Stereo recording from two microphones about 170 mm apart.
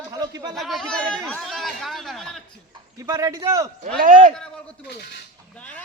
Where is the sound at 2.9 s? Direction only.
20° right (ahead or behind).